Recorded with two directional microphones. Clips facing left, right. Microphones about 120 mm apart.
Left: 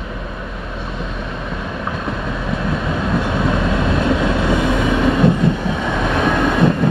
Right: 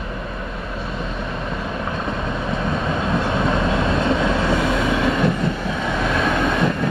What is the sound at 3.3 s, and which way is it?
Vehicle, 5° left (ahead or behind).